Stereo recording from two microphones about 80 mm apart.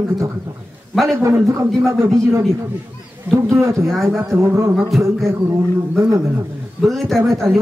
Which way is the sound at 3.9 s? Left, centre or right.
Centre.